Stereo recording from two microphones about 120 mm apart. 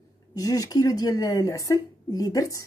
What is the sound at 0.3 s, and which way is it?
Speech, 30° left (ahead or behind).